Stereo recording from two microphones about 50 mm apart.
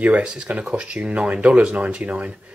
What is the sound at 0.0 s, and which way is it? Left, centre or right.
Speech, right.